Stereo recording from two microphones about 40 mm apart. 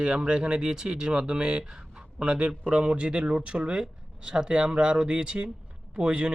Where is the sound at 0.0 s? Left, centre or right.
Right.